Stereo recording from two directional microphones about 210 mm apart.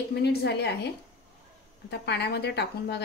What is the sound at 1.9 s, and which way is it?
Speech, 55° left (ahead or behind).